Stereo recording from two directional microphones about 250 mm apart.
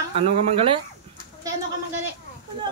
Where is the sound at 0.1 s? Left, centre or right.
Right.